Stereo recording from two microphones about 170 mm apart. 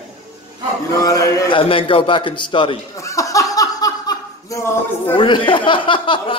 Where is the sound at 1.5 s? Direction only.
30° left (ahead or behind).